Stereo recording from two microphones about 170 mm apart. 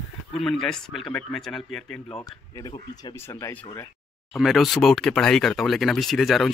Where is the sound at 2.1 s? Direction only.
25° left (ahead or behind).